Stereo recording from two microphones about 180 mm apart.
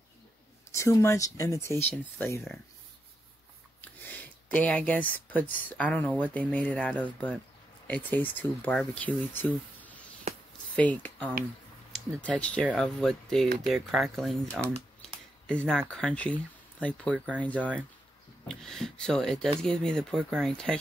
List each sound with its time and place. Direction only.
0.7 s speech: 15° left (ahead or behind)
3.8 s speech: 10° left (ahead or behind)
15.0 s a sound: 5° left (ahead or behind)
15.9 s speech: 5° left (ahead or behind)
17.4 s speech: 10° left (ahead or behind)